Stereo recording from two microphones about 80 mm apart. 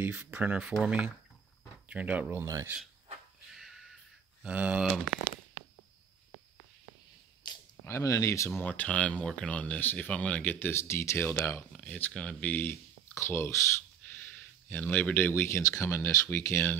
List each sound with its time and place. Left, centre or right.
0.0 s speech: centre
3.5 s crow: centre
4.4 s speech: centre
7.8 s speech: left
8.5 s speech: left
11.7 s speech: centre
13.1 s speech: left
14.1 s a sound: left
15.8 s speech: left